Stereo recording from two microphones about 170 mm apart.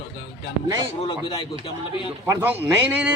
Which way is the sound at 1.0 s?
30° left (ahead or behind).